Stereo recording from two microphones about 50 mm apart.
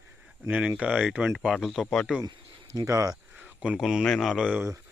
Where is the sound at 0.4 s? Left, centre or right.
Right.